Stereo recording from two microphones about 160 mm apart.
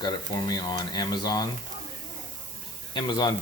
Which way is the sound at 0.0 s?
25° left (ahead or behind).